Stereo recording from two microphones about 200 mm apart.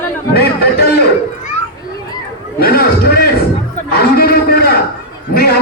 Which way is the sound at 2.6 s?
50° left (ahead or behind).